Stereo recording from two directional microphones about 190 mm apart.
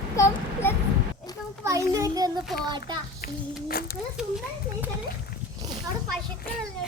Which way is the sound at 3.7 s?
50° left (ahead or behind).